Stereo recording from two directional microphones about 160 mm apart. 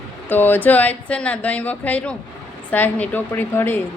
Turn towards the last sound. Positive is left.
turn(degrees=10)  # may be behind; listen again after turning